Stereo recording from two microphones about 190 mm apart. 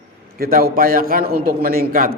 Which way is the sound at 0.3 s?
50° right (ahead or behind).